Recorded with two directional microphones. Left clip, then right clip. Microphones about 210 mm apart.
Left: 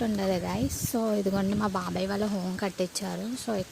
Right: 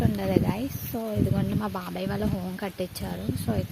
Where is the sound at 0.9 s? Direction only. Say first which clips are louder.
Left 2 dB; 20° left (ahead or behind).